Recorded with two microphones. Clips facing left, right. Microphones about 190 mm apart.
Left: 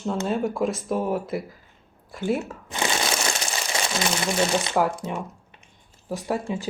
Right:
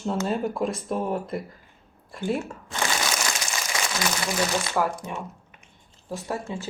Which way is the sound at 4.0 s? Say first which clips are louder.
Left 3 dB; 25° left (ahead or behind).